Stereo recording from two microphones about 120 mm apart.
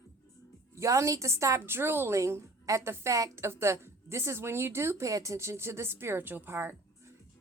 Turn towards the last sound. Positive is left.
turn(degrees=-20)  # may be behind; listen again after turning